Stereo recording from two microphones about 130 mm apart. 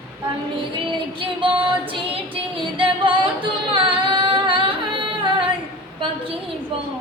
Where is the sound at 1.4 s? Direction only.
40° right (ahead or behind).